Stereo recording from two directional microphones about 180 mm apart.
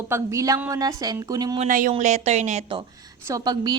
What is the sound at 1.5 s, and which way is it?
A woman's voice, 45° right (ahead or behind).